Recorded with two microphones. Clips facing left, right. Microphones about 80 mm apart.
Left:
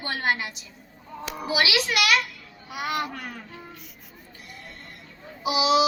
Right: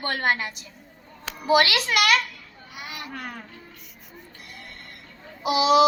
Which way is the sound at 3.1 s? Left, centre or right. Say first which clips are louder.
Right 1 dB; right.